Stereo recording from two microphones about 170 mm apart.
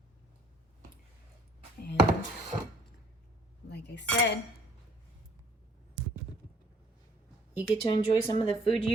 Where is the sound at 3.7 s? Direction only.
80° left.